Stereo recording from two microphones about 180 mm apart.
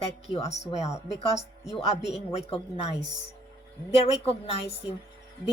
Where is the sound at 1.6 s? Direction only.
Centre (ahead or behind).